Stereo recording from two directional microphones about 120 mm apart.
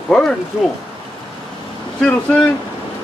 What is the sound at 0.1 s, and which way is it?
Speech, 5° left (ahead or behind).